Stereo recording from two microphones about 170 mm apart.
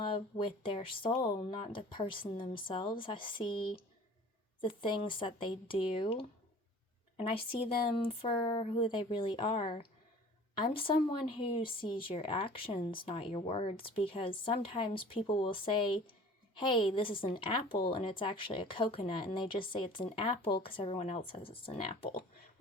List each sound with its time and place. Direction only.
0.1 s a woman's voice: 30° left (ahead or behind)